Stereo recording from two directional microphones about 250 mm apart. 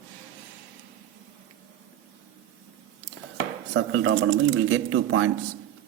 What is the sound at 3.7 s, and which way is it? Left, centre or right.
Speech, right.